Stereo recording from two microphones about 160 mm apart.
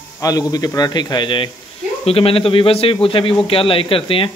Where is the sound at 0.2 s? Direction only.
25° left (ahead or behind).